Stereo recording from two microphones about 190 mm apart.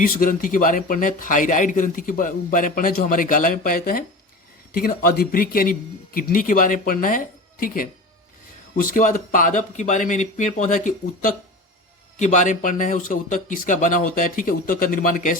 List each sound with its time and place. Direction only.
0.0 s a man's voice: 45° left (ahead or behind)